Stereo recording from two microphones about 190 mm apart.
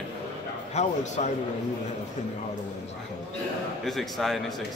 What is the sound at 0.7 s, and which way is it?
Speech, 40° left (ahead or behind).